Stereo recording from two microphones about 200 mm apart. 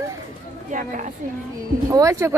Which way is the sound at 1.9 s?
15° right (ahead or behind).